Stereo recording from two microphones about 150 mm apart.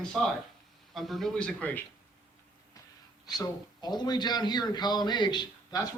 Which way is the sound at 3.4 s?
25° left (ahead or behind).